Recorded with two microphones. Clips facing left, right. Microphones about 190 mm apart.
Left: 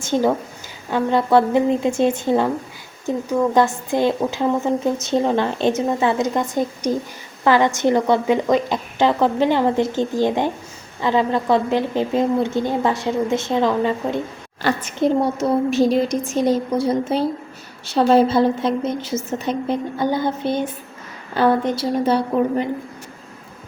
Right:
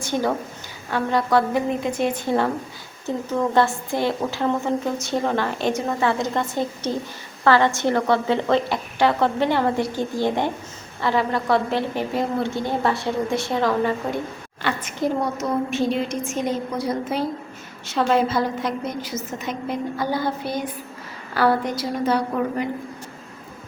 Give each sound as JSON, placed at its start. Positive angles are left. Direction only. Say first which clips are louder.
{"t": 0.9, "sound": "a woman's voice", "louder": "left 4 dB", "side_deg": 20}
{"t": 14.6, "sound": "a woman's voice", "louder": "left 5 dB", "side_deg": 40}